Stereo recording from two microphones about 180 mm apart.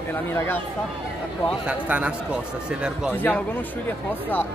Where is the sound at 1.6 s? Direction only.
5° right (ahead or behind).